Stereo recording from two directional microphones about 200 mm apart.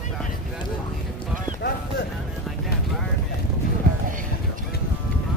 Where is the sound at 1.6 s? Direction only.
55° left (ahead or behind).